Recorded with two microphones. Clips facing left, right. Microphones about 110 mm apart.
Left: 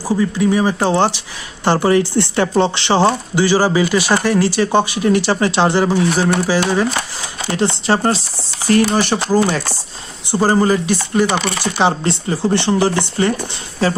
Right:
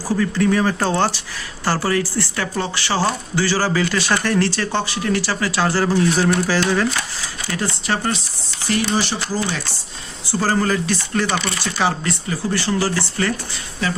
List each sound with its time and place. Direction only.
0.1 s speech: 15° left (ahead or behind)
7.5 s speech: 25° left (ahead or behind)
8.6 s speech: 45° left (ahead or behind)
10.3 s speech: 20° left (ahead or behind)
11.6 s speech: 25° left (ahead or behind)
13.8 s speech: 35° left (ahead or behind)